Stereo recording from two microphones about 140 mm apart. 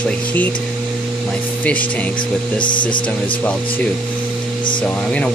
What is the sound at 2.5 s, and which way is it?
Speech, 35° left (ahead or behind).